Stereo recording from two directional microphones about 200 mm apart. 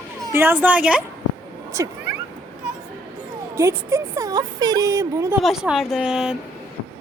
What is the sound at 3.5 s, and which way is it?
Speech, 15° right (ahead or behind).